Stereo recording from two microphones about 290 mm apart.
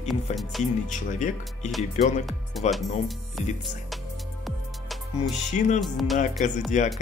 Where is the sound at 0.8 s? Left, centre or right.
Left.